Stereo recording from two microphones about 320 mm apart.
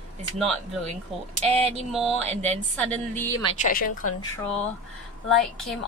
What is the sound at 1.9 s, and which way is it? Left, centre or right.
Speech, centre.